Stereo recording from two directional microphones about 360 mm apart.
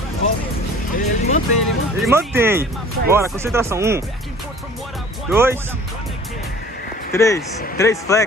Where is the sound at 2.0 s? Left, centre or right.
Centre.